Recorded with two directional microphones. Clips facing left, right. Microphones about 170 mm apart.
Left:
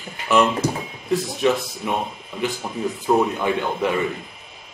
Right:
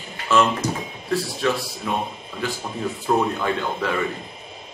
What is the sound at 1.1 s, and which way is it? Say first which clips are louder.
Speech: left 3 dB; 20° left (ahead or behind).